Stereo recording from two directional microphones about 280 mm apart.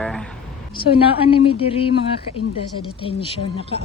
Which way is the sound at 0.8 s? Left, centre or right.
Centre.